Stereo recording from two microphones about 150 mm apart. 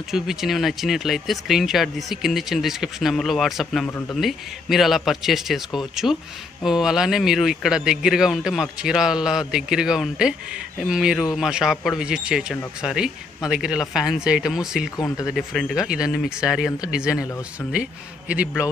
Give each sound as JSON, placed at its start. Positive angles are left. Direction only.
{"t": 0.1, "sound": "a man's voice", "side_deg": 0}
{"t": 15.0, "sound": "speech", "side_deg": 20}
{"t": 15.2, "sound": "a man's voice", "side_deg": 0}